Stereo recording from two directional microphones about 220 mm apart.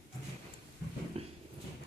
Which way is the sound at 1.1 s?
25° right (ahead or behind).